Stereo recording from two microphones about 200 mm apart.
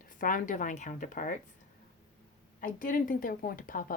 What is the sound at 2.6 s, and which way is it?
A woman's voice, 40° left (ahead or behind).